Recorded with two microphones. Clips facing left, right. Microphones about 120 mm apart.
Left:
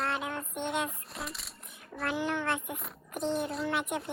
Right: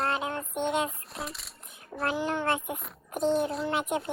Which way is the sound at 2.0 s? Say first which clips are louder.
Right 3 dB; 35° right (ahead or behind).